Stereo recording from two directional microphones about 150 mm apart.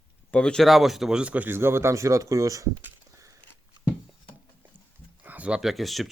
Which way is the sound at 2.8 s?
20° right (ahead or behind).